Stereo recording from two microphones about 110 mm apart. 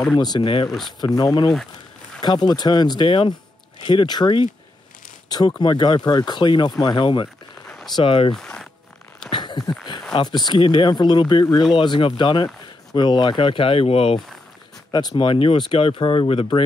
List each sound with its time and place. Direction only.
0.2 s speech: 40° left (ahead or behind)
0.7 s speech: centre (ahead or behind)
1.0 s speech: 40° left (ahead or behind)
5.6 s speech: 40° left (ahead or behind)
7.6 s a sound: centre (ahead or behind)
7.9 s speech: 55° left (ahead or behind)
8.4 s zipper: 5° left (ahead or behind)
9.3 s a sound: 45° left (ahead or behind)
10.2 s speech: 40° left (ahead or behind); by 14.1 s 60° left (ahead or behind)
14.9 s speech: 40° left (ahead or behind)
15.2 s speech: 55° left (ahead or behind)